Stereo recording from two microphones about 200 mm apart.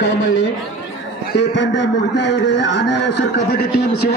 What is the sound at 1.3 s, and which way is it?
A man's voice, 60° left (ahead or behind).